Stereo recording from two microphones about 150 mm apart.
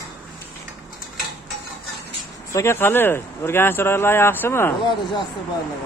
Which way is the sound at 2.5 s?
15° left (ahead or behind).